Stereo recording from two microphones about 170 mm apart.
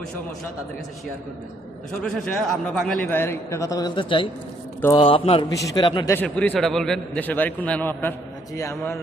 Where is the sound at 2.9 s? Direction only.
10° left (ahead or behind); by 6.1 s 25° left (ahead or behind).